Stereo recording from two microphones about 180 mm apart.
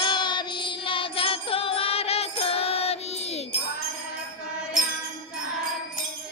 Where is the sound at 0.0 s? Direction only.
25° left (ahead or behind).